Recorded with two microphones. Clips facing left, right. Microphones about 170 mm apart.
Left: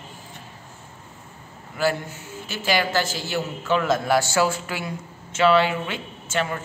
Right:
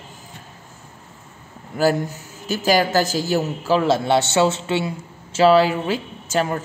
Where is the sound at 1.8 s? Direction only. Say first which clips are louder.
Right 5 dB; 40° right (ahead or behind).